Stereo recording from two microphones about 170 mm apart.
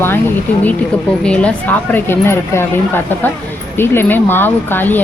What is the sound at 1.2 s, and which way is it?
Speech, 5° left (ahead or behind).